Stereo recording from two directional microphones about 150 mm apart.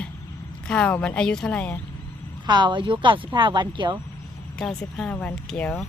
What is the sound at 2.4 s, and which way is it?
Speech, 30° right (ahead or behind).